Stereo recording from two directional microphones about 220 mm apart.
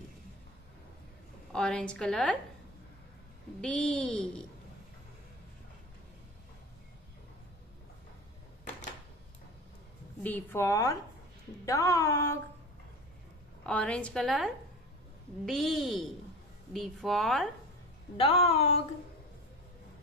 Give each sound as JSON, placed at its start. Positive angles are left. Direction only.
{"t": 1.5, "sound": "a woman's voice", "side_deg": 5}
{"t": 3.6, "sound": "a woman's voice", "side_deg": 5}
{"t": 10.2, "sound": "a woman's voice", "side_deg": 10}
{"t": 13.7, "sound": "a woman's voice", "side_deg": 5}
{"t": 18.1, "sound": "speech", "side_deg": 25}